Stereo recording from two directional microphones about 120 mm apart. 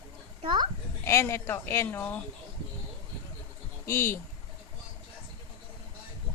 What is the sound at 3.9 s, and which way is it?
Speech, 20° left (ahead or behind).